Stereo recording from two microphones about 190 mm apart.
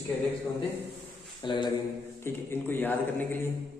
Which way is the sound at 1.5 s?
25° left (ahead or behind).